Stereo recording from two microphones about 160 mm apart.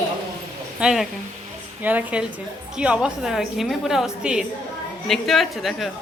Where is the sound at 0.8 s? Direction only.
Centre (ahead or behind).